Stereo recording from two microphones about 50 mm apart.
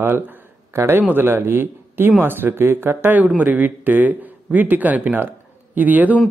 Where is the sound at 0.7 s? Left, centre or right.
Right.